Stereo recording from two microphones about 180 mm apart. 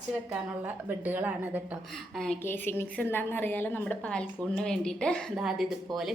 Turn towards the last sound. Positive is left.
turn(degrees=0)  # may be behind; listen again after turning